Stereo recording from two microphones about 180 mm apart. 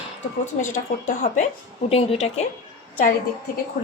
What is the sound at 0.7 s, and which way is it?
A woman's voice, 45° left (ahead or behind).